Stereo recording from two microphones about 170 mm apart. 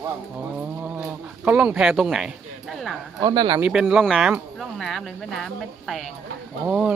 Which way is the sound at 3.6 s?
5° right (ahead or behind).